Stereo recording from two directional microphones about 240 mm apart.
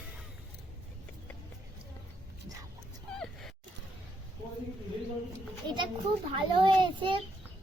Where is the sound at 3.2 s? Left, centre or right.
Centre.